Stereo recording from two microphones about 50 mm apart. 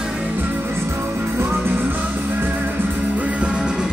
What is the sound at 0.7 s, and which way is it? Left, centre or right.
Music, right.